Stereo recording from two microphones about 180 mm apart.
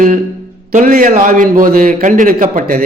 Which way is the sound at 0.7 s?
45° right (ahead or behind).